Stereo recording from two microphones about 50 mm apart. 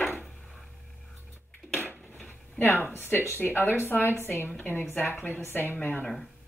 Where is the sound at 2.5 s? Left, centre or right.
Left.